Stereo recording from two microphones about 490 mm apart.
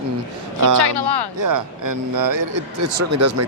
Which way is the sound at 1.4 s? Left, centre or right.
Right.